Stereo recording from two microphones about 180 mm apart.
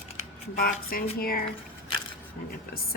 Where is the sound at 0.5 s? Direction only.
55° left (ahead or behind).